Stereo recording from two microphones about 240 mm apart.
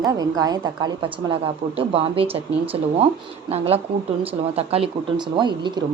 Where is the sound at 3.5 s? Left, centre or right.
Right.